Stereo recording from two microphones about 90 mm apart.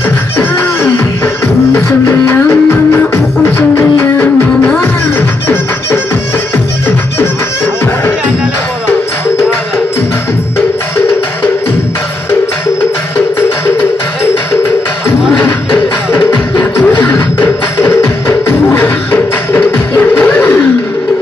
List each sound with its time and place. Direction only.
0.4 s music: 20° left (ahead or behind)
15.3 s music: 20° left (ahead or behind)
20.2 s a sound: 15° left (ahead or behind)